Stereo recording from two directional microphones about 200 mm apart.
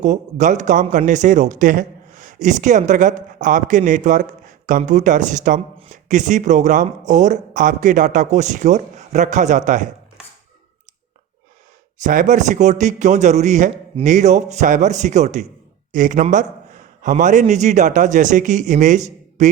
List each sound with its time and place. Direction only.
0.0 s speech: 35° right (ahead or behind)
12.0 s speech: 40° right (ahead or behind)